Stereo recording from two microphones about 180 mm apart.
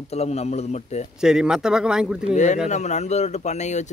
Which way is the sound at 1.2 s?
5° right (ahead or behind).